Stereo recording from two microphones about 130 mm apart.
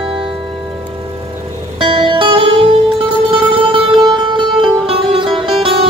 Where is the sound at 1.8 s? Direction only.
40° right (ahead or behind).